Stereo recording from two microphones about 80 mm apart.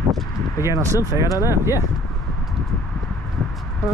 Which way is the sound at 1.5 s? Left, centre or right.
Right.